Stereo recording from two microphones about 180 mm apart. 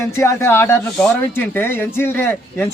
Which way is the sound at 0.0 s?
15° left (ahead or behind).